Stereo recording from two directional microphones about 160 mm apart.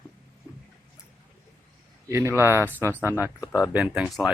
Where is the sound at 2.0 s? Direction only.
15° right (ahead or behind).